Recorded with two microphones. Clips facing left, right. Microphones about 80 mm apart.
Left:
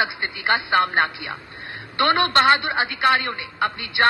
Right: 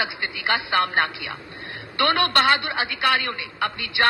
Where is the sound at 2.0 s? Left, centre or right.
Left.